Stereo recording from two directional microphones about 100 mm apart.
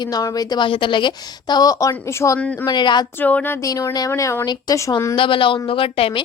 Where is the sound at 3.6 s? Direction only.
35° left (ahead or behind).